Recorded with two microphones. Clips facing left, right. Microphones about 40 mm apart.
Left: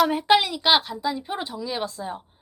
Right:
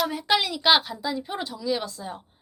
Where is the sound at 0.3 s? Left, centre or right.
Centre.